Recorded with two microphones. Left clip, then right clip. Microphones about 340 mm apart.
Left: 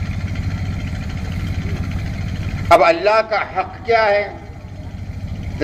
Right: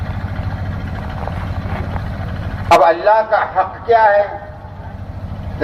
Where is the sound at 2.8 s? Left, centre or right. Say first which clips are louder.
Right 2 dB; left.